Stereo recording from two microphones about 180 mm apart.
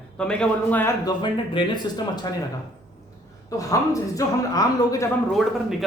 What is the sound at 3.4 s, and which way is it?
Speech, 20° left (ahead or behind).